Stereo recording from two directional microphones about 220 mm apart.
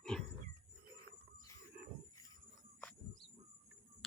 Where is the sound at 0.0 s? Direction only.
Centre (ahead or behind).